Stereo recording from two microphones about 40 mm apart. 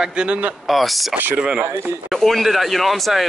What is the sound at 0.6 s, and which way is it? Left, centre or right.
Speech, centre.